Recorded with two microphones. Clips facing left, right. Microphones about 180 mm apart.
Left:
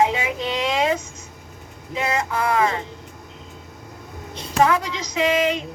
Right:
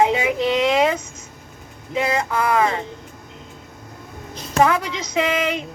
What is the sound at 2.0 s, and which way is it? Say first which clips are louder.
Speech: right 3 dB; 30° right (ahead or behind).